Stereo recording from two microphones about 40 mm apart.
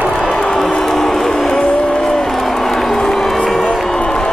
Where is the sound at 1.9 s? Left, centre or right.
Centre.